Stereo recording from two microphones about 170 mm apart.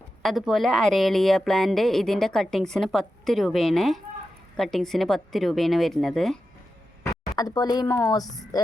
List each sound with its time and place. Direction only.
0.2 s a woman's voice: centre (ahead or behind)
7.0 s speech: 20° left (ahead or behind)
8.5 s music: 20° left (ahead or behind)